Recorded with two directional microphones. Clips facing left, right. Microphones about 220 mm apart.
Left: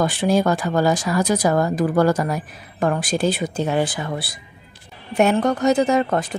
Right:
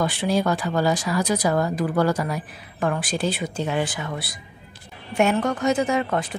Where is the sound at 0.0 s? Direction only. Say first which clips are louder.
Left 4 dB; 45° left (ahead or behind).